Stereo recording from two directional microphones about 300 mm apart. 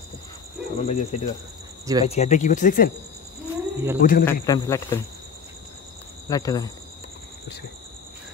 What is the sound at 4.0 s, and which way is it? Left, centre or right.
Speech, left.